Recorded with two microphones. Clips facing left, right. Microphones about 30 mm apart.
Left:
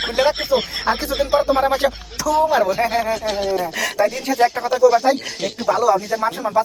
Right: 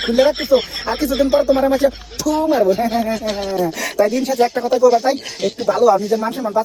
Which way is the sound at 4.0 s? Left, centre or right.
Left.